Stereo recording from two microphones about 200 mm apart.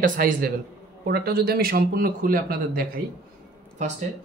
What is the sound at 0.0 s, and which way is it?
Speech, 45° right (ahead or behind).